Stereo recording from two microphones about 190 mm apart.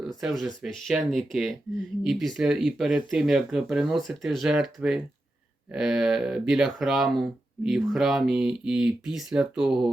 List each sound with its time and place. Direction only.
0.2 s speech: centre (ahead or behind)